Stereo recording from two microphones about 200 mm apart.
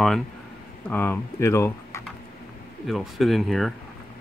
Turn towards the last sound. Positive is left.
turn(degrees=0)  # may be behind; listen again after turning